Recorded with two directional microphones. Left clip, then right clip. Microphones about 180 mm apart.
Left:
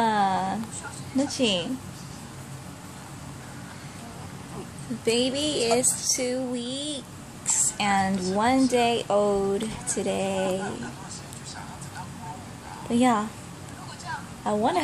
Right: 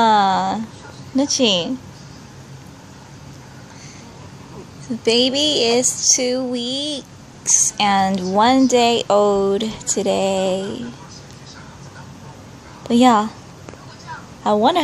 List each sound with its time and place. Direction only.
0.0 s a sound: 45° right (ahead or behind)
1.1 s speech: 45° right (ahead or behind)
5.0 s speech: 45° right (ahead or behind)
12.9 s speech: 50° right (ahead or behind)
14.4 s a woman's voice: 50° right (ahead or behind)